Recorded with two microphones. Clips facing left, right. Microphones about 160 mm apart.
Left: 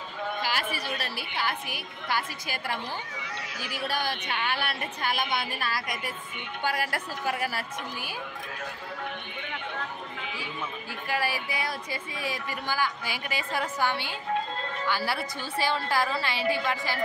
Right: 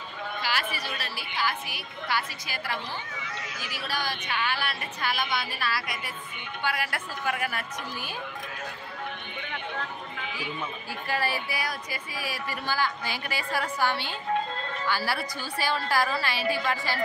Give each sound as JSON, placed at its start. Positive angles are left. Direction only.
{"t": 0.4, "sound": "a woman's voice", "side_deg": 50}
{"t": 11.1, "sound": "a woman's voice", "side_deg": 15}